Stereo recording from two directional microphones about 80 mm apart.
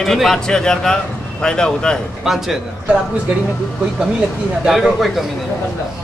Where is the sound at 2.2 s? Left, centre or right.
Centre.